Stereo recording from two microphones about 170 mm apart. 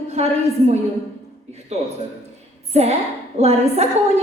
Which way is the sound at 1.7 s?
40° right (ahead or behind).